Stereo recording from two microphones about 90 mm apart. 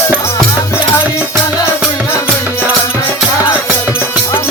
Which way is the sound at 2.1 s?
10° right (ahead or behind).